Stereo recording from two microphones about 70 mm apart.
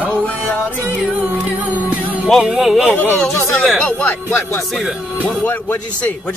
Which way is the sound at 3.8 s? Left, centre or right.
Left.